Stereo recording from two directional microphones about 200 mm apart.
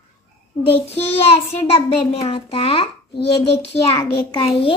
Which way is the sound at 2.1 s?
30° left (ahead or behind).